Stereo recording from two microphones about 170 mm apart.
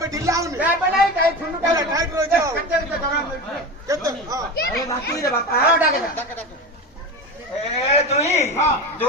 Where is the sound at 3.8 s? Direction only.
20° right (ahead or behind).